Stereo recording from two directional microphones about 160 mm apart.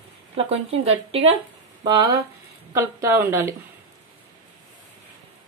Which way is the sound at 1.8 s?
25° right (ahead or behind).